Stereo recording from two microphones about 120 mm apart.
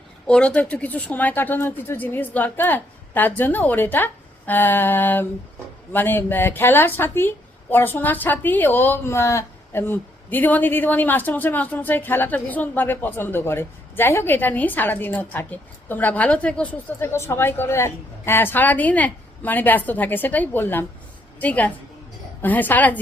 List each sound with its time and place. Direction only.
0.3 s a woman's voice: 10° left (ahead or behind)